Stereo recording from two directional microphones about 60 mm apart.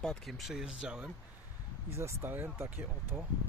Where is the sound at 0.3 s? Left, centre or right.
Centre.